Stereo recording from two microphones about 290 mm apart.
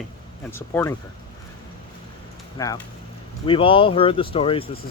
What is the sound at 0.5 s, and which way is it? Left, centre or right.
Speech, centre.